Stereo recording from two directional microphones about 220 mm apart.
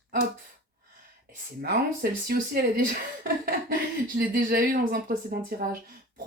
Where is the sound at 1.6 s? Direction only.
45° right (ahead or behind).